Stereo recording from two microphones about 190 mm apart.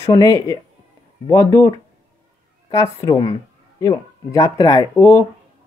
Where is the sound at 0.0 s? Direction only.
15° left (ahead or behind).